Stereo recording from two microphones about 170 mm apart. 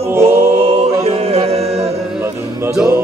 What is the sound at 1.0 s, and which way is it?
Music, 35° right (ahead or behind).